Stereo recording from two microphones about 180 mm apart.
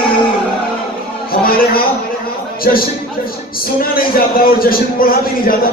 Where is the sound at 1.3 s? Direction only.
55° left (ahead or behind).